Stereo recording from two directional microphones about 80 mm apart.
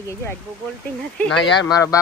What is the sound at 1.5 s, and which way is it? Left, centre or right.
Speech, left.